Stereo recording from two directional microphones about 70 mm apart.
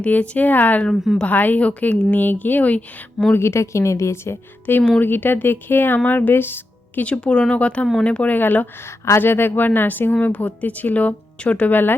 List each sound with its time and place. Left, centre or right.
0.0 s speech: left
0.9 s a woman's voice: centre
1.2 s speech: left
3.3 s a woman's voice: left
7.0 s speech: centre